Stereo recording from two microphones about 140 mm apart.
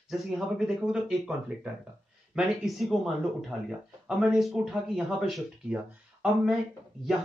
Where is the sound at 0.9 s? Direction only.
5° right (ahead or behind).